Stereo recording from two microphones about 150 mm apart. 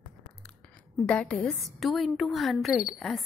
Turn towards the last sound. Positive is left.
turn(degrees=0)  # may be behind; listen again after turning